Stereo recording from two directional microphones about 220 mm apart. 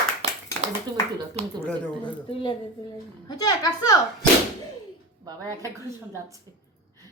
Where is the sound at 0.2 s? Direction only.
30° right (ahead or behind).